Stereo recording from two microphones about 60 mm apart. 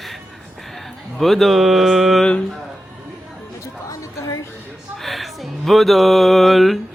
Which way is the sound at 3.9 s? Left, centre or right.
Left.